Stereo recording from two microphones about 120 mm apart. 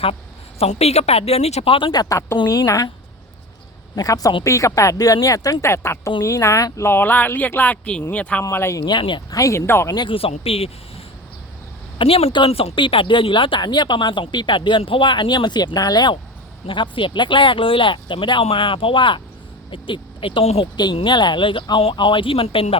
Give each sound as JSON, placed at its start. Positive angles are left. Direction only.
{"t": 0.6, "sound": "a woman's voice", "side_deg": 60}
{"t": 1.9, "sound": "speech", "side_deg": 30}
{"t": 3.9, "sound": "speech", "side_deg": 30}
{"t": 8.4, "sound": "speech", "side_deg": 25}
{"t": 8.9, "sound": "speech", "side_deg": 40}
{"t": 9.3, "sound": "speech", "side_deg": 25}
{"t": 9.9, "sound": "speech", "side_deg": 35}
{"t": 10.4, "sound": "speech", "side_deg": 55}
{"t": 20.9, "sound": "speech", "side_deg": 40}